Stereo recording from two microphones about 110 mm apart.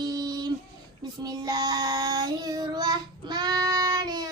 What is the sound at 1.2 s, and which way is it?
Child singing, 40° right (ahead or behind).